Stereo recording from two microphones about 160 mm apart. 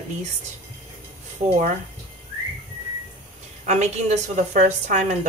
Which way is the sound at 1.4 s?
50° right (ahead or behind).